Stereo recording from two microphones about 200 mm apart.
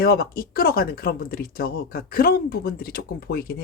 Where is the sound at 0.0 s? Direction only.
50° left (ahead or behind).